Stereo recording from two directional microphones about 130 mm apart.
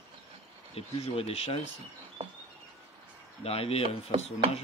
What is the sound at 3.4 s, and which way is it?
Speech, 50° left (ahead or behind).